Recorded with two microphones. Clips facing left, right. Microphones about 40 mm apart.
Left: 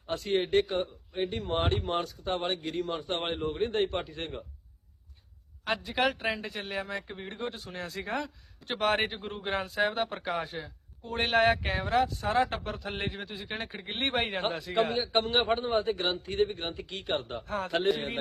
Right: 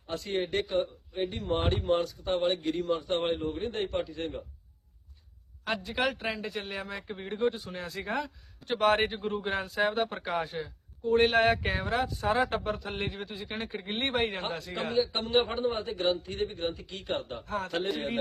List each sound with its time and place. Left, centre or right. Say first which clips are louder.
0.1 s a man's voice: left 4 dB; left
5.6 s speech: left 2 dB; centre
14.8 s a man's voice: left 2 dB; left
17.4 s speech: even; centre